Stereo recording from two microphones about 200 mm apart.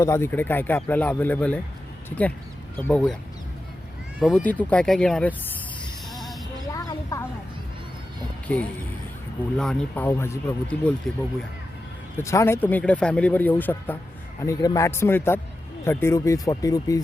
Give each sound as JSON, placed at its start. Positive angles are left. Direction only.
{"t": 0.0, "sound": "speech", "side_deg": 15}
{"t": 4.2, "sound": "speech", "side_deg": 0}
{"t": 6.7, "sound": "a sound", "side_deg": 15}
{"t": 9.6, "sound": "speech", "side_deg": 5}
{"t": 12.2, "sound": "speech", "side_deg": 15}